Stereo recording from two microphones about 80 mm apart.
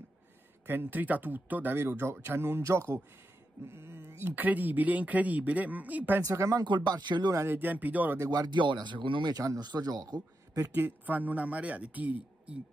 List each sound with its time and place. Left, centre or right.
0.7 s speech: right
6.2 s speech: right
6.6 s speech: right
7.3 s speech: right
8.3 s speech: right
9.3 s a man's voice: right
10.7 s speech: right